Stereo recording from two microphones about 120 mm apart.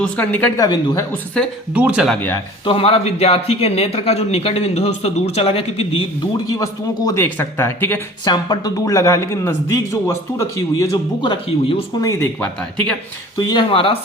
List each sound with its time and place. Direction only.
0.0 s speech: 10° left (ahead or behind)
0.5 s speech: 35° left (ahead or behind)
1.4 s speech: 10° left (ahead or behind)
1.7 s speech: 10° right (ahead or behind)
2.6 s speech: 50° left (ahead or behind)
6.5 s a man's voice: 30° left (ahead or behind)
7.3 s speech: 15° left (ahead or behind)
8.2 s a man's voice: 35° left (ahead or behind)
11.2 s speech: 45° left (ahead or behind)
13.4 s speech: 40° left (ahead or behind)